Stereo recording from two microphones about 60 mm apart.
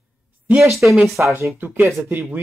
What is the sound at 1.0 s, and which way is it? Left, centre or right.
Speech, centre.